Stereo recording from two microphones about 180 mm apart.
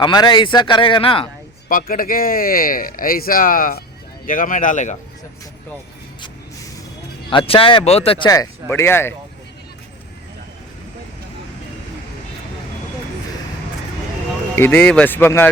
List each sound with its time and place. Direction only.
0.0 s a man's voice: 25° left (ahead or behind)
1.6 s speech: 50° left (ahead or behind)
7.3 s speech: 30° left (ahead or behind)
8.7 s speech: 15° left (ahead or behind)
14.5 s speech: 10° left (ahead or behind)